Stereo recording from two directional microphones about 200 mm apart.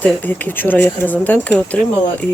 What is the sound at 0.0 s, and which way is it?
Speech, 10° left (ahead or behind).